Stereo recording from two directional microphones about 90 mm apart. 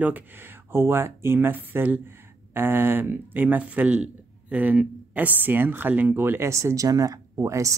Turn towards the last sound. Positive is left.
turn(degrees=-35)  # may be behind; listen again after turning